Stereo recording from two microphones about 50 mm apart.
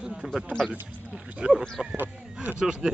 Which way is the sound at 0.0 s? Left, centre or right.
Centre.